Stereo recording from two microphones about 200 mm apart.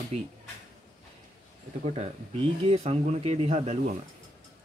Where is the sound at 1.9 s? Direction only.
30° right (ahead or behind).